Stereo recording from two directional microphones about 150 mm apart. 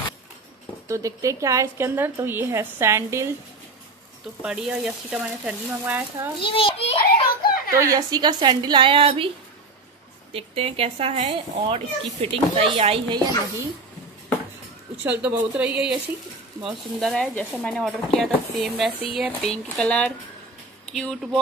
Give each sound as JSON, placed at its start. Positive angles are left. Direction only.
{"t": 0.8, "sound": "a woman's voice", "side_deg": -20}
{"t": 4.4, "sound": "speech", "side_deg": -5}
{"t": 6.4, "sound": "a sound", "side_deg": 35}
{"t": 7.0, "sound": "a sound", "side_deg": 80}
{"t": 7.7, "sound": "a woman's voice", "side_deg": -20}
{"t": 10.3, "sound": "speech", "side_deg": -40}
{"t": 15.0, "sound": "speech", "side_deg": -10}